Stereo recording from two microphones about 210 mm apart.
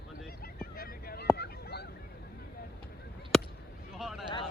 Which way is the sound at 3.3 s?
Centre (ahead or behind).